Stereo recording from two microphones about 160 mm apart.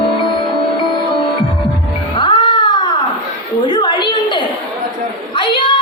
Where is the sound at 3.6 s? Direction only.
25° left (ahead or behind).